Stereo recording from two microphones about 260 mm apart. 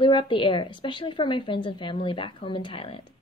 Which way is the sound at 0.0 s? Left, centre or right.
Centre.